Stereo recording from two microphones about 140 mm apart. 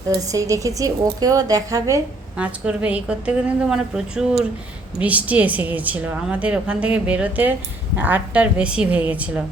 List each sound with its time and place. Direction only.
0.1 s a woman's voice: 25° right (ahead or behind)
2.4 s a woman's voice: 10° right (ahead or behind)